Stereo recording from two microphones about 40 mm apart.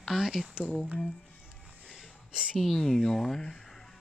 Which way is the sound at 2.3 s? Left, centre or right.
Right.